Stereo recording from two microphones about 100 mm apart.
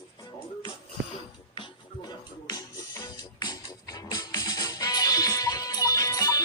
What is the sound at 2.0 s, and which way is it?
Music, 40° left (ahead or behind).